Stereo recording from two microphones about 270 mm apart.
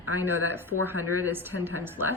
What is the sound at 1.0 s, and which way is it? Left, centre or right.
Speech, left.